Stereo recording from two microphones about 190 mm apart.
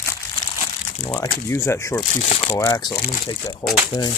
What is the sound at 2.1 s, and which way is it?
Speech, 35° left (ahead or behind).